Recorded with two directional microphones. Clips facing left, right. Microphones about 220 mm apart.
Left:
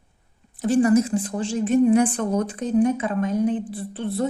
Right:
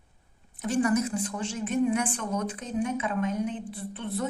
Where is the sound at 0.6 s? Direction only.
30° left (ahead or behind).